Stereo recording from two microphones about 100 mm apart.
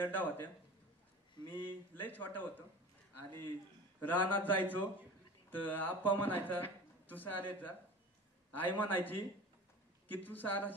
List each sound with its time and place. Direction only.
0.0 s speech: 20° left (ahead or behind)
2.0 s speech: 15° left (ahead or behind)